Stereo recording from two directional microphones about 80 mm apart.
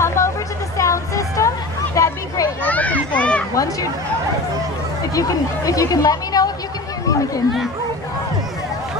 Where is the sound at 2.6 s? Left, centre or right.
Centre.